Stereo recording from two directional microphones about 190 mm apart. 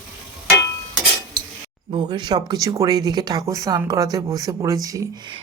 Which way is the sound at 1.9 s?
25° right (ahead or behind).